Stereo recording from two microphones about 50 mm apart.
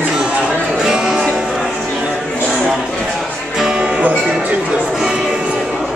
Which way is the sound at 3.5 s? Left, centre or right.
Centre.